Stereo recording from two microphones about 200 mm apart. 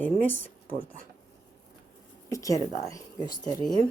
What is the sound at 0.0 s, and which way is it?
Speech, 10° left (ahead or behind).